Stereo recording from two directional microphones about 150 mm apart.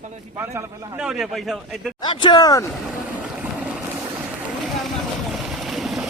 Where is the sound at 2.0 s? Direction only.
30° left (ahead or behind).